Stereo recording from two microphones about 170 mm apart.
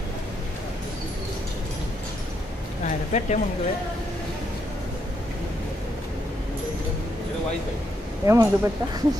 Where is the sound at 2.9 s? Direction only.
45° left (ahead or behind).